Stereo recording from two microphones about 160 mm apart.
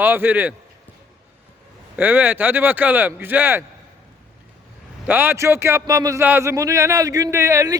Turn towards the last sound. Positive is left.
turn(degrees=-20)  # may be behind; listen again after turning